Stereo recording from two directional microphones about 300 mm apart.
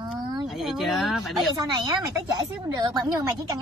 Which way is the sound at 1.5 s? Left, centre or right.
Centre.